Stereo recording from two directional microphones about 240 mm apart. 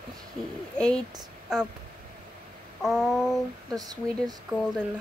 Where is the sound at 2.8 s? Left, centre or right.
Centre.